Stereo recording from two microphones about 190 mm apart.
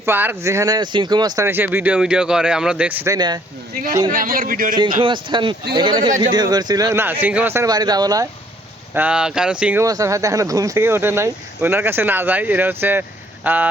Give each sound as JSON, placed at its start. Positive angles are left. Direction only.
{"t": 0.0, "sound": "speech", "side_deg": -10}
{"t": 4.1, "sound": "a man's voice", "side_deg": -50}
{"t": 5.0, "sound": "speech", "side_deg": -25}
{"t": 9.0, "sound": "speech", "side_deg": -5}
{"t": 9.8, "sound": "speech", "side_deg": -20}